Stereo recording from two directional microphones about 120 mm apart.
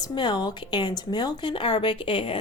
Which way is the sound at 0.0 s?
40° left (ahead or behind).